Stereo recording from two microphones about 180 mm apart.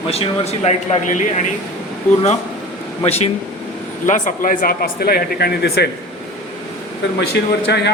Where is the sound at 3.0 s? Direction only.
35° left (ahead or behind).